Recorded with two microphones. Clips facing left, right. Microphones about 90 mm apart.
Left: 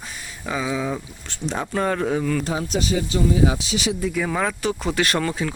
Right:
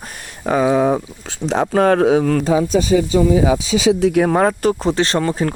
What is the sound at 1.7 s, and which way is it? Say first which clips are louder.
Speech: right 9 dB; 85° right.